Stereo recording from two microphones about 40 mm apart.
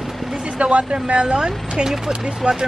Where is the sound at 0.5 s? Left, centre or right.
Right.